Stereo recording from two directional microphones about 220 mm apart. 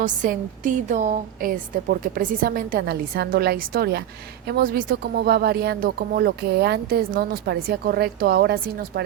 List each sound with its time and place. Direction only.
0.0 s a woman's voice: 35° right (ahead or behind)